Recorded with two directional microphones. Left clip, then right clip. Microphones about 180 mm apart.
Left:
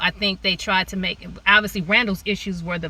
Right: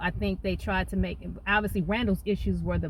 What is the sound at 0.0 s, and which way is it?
Speech, 15° right (ahead or behind).